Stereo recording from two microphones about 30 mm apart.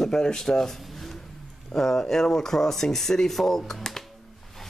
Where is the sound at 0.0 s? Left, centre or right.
Left.